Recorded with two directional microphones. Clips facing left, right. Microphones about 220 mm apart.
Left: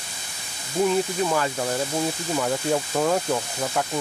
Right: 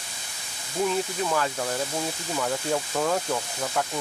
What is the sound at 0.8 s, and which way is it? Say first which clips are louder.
Speech: left 4 dB; 10° left (ahead or behind).